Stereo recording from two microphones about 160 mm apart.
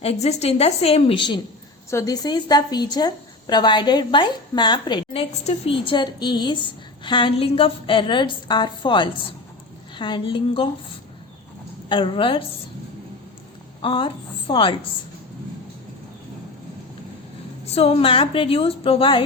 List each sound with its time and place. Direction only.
0.0 s a woman's voice: 40° left (ahead or behind)
1.9 s a woman's voice: 20° left (ahead or behind)
11.9 s a woman's voice: 30° left (ahead or behind)
13.8 s a woman's voice: 30° left (ahead or behind)
17.7 s a woman's voice: 40° left (ahead or behind)